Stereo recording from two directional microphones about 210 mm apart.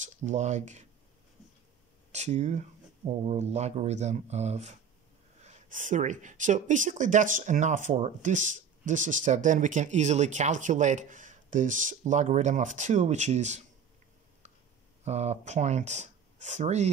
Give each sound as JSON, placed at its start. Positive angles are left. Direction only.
{"t": 0.0, "sound": "speech", "side_deg": -35}
{"t": 2.1, "sound": "speech", "side_deg": -35}
{"t": 15.0, "sound": "speech", "side_deg": -30}